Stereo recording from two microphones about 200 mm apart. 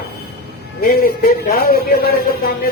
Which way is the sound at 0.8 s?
50° left (ahead or behind).